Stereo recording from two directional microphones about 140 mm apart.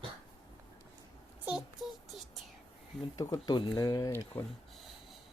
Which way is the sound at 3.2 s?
30° left (ahead or behind).